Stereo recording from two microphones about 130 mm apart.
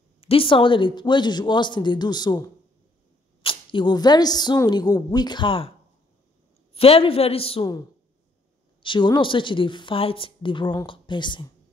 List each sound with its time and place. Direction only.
0.2 s speech: 45° left (ahead or behind)
3.4 s a man's voice: 35° left (ahead or behind)
8.8 s speech: 35° left (ahead or behind)